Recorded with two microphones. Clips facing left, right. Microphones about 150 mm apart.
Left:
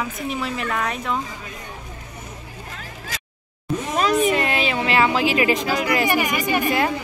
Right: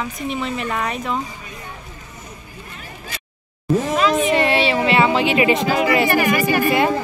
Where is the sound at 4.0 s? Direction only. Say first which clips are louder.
Left 2 dB; 45° left (ahead or behind).